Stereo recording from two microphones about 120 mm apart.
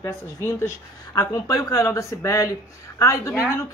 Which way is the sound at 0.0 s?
25° left (ahead or behind).